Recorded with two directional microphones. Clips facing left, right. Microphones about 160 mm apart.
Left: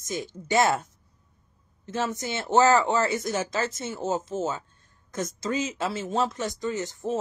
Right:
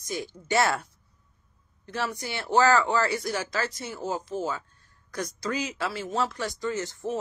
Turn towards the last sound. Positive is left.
turn(degrees=20)  # may be behind; listen again after turning